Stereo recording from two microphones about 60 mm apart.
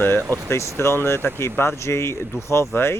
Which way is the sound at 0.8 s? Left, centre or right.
Left.